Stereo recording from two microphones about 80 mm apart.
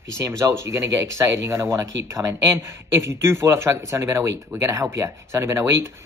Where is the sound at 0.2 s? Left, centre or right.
Right.